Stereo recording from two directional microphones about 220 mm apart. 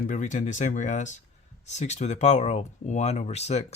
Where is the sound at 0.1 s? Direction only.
35° left (ahead or behind).